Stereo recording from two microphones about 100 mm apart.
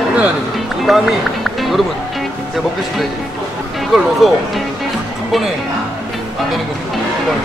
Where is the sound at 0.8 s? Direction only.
Centre (ahead or behind).